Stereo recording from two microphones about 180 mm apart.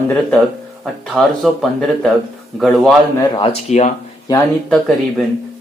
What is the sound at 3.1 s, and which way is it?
Speech, 25° left (ahead or behind).